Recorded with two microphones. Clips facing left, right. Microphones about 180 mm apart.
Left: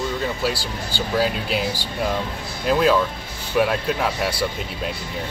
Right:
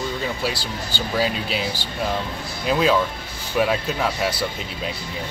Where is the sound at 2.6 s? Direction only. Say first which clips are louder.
Left 1 dB; centre (ahead or behind).